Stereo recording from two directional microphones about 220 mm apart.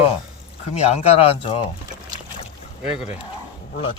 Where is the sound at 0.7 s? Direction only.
30° left (ahead or behind).